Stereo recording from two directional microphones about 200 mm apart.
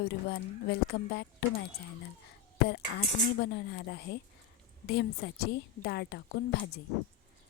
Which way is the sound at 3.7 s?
55° left (ahead or behind).